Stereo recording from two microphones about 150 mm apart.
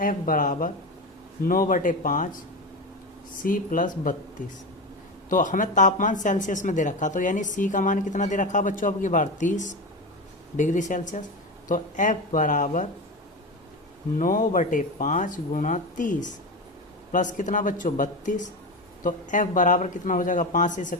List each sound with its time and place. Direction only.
0.0 s speech: 65° left (ahead or behind)
3.4 s speech: 65° left (ahead or behind)
14.2 s speech: 60° left (ahead or behind)